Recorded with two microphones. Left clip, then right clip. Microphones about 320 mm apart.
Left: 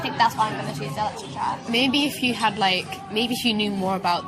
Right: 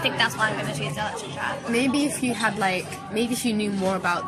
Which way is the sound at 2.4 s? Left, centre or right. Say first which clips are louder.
Left 2 dB; centre.